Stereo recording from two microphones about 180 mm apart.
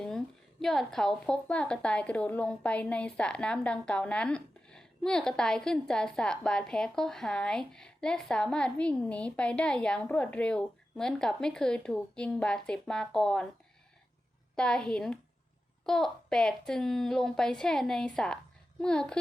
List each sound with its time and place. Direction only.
0.6 s a woman's voice: centre (ahead or behind)
14.5 s a woman's voice: 5° left (ahead or behind)